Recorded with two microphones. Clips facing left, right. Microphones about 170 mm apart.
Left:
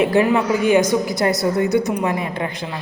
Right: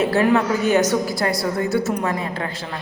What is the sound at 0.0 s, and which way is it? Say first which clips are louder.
A woman's voice: left 1 dB; 15° left (ahead or behind).